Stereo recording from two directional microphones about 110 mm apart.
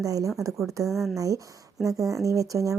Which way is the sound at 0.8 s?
Centre (ahead or behind).